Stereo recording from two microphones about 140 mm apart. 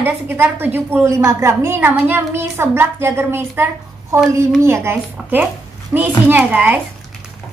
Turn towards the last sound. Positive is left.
turn(degrees=-10)  # may be behind; listen again after turning